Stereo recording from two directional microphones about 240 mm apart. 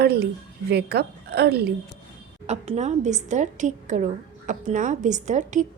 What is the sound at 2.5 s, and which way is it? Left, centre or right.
A woman's voice, right.